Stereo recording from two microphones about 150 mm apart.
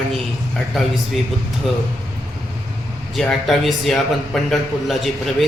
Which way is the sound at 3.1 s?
Centre (ahead or behind).